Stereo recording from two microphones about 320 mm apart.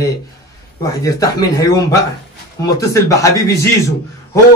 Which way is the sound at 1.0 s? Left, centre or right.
Centre.